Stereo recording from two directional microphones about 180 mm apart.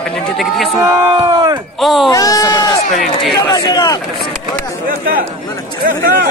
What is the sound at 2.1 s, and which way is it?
Sheep, 20° left (ahead or behind).